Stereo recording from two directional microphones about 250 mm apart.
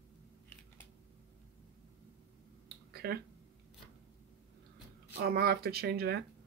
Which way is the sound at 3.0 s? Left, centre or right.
Right.